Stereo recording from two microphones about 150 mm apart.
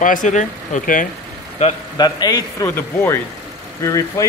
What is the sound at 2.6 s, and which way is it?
A man's voice, 15° left (ahead or behind).